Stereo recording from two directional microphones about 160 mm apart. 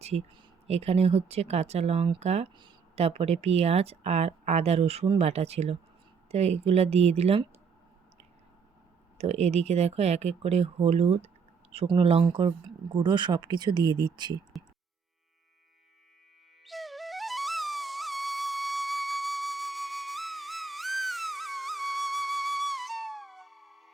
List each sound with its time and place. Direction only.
0.0 s speech: 40° right (ahead or behind)
9.1 s speech: 40° right (ahead or behind); by 14.3 s 25° right (ahead or behind)
14.5 s music: centre (ahead or behind)
16.6 s music: centre (ahead or behind)